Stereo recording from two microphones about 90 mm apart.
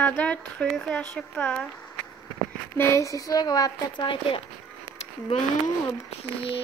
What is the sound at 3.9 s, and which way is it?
Speech, 65° left (ahead or behind).